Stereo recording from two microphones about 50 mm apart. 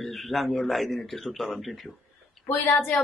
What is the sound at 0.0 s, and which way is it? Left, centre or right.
Speech, centre.